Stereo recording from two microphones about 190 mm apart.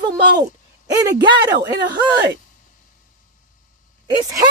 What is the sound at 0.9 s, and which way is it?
Speech, 15° right (ahead or behind).